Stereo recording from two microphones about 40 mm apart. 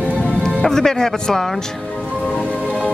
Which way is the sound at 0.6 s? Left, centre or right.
Centre.